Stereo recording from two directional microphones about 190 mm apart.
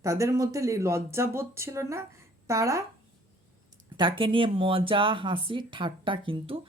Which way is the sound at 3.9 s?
25° right (ahead or behind).